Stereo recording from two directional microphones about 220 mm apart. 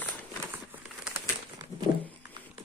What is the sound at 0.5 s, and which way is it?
Crumpling, 10° right (ahead or behind).